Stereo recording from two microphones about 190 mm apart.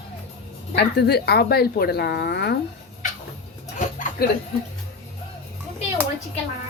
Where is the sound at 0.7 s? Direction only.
60° left (ahead or behind).